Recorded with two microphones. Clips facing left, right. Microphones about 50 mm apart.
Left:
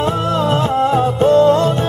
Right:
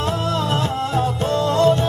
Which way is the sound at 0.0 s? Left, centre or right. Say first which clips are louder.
Left 5 dB; left.